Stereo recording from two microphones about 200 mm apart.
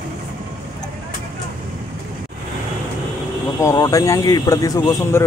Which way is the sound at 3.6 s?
20° left (ahead or behind).